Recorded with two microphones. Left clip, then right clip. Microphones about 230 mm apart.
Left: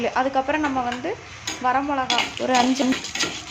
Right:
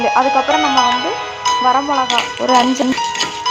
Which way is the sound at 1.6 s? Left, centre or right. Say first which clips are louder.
Right 4 dB; centre.